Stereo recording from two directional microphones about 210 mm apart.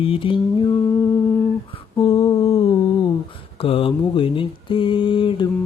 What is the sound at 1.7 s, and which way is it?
Humming, 25° left (ahead or behind).